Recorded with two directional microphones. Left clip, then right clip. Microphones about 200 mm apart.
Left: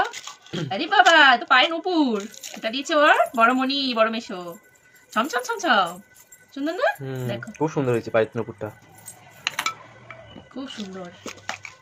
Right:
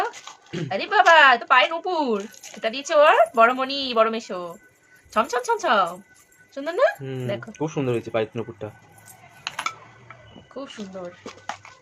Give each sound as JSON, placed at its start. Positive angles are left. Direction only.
{"t": 0.7, "sound": "speech", "side_deg": -50}
{"t": 7.0, "sound": "speech", "side_deg": 0}
{"t": 9.4, "sound": "coin", "side_deg": -10}